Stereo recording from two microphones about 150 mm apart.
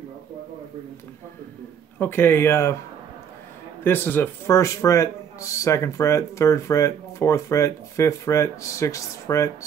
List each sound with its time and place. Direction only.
2.0 s speech: 15° left (ahead or behind)
3.8 s speech: 15° left (ahead or behind)